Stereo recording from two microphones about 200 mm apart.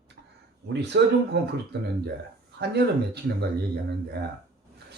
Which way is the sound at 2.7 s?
55° right (ahead or behind).